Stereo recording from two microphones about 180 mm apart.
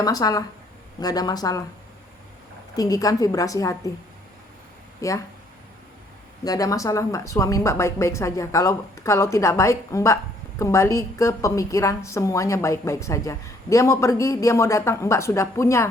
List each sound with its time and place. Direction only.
0.0 s a woman's voice: 20° left (ahead or behind)
2.7 s a woman's voice: 20° left (ahead or behind)
4.9 s speech: 15° left (ahead or behind)
6.4 s a woman's voice: 20° left (ahead or behind)